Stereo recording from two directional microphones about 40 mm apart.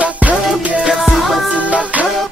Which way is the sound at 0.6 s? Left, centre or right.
Right.